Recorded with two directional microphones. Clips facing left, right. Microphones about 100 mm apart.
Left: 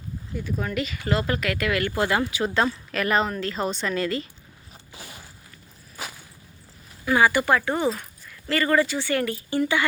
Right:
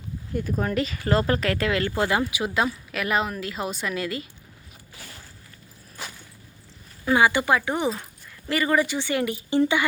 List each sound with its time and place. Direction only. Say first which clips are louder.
0.3 s a woman's voice: right 3 dB; 40° right (ahead or behind); by 4.3 s 5° right (ahead or behind)
4.9 s a sound: left 2 dB; 15° left (ahead or behind)
7.0 s a woman's voice: even; 20° right (ahead or behind)